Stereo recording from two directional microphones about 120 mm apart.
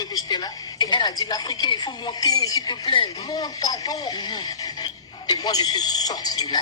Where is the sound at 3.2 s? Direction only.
30° left (ahead or behind).